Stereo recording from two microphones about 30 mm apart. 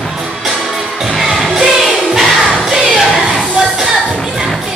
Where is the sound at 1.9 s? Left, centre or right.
Centre.